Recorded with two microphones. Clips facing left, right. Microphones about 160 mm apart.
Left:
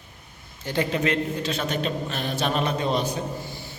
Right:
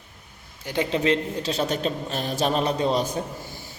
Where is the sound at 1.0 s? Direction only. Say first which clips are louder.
Right 2 dB; 35° right (ahead or behind).